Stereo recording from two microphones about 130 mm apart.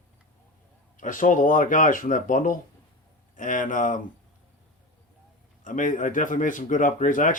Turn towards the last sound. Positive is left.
turn(degrees=80)